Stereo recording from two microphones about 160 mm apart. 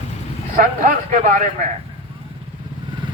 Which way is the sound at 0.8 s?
50° right (ahead or behind).